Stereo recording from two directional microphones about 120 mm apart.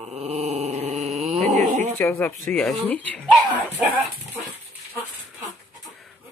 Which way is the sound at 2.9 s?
15° left (ahead or behind).